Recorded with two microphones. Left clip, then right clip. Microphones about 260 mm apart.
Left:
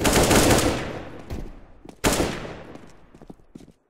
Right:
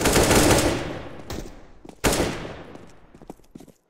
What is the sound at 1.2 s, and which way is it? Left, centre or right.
Thump, right.